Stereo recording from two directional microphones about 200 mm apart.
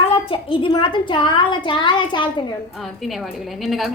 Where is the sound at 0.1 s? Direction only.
25° left (ahead or behind).